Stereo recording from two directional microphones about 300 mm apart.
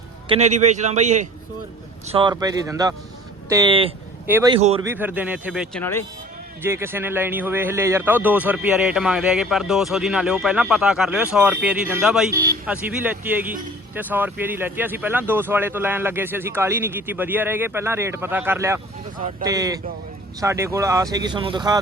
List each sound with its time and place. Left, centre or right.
0.3 s a man's voice: right
4.5 s a man's voice: centre
4.9 s a man's voice: centre
6.6 s a man's voice: centre